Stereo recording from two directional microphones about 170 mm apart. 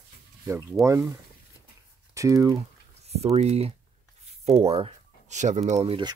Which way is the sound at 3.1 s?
40° right (ahead or behind).